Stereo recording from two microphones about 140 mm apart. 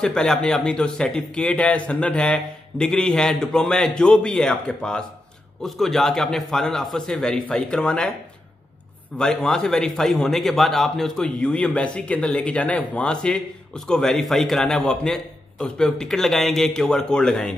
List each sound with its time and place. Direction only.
0.0 s speech: 5° left (ahead or behind)
9.2 s speech: 5° left (ahead or behind)